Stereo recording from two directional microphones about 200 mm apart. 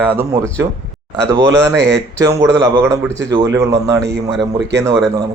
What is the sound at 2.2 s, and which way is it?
Speech, 15° right (ahead or behind).